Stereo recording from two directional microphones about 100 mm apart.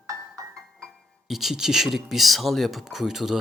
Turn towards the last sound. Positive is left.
turn(degrees=-5)  # may be behind; listen again after turning